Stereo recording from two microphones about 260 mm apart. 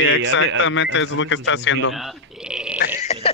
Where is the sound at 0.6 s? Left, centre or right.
Left.